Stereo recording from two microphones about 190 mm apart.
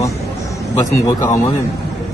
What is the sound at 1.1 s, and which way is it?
Speech, 15° left (ahead or behind).